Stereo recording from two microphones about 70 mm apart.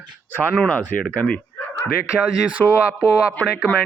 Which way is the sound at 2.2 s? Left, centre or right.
Right.